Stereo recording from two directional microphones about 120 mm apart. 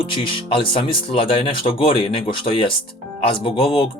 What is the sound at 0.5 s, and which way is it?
Speech, 50° left (ahead or behind).